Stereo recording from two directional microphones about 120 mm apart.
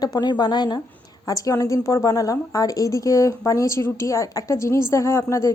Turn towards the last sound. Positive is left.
turn(degrees=25)  # may be behind; listen again after turning